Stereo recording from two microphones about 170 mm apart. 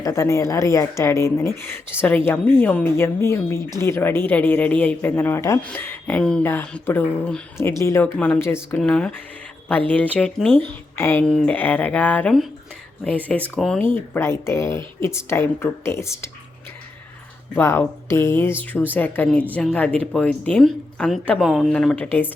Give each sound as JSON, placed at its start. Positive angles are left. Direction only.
{"t": 0.0, "sound": "speech", "side_deg": 15}
{"t": 17.5, "sound": "speech", "side_deg": 15}